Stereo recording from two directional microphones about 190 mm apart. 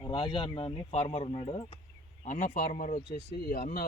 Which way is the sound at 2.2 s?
45° left (ahead or behind).